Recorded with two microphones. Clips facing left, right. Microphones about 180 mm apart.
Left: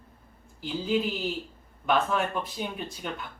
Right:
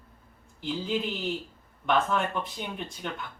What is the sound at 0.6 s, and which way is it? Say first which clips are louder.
A woman's voice: left 2 dB; 5° left (ahead or behind).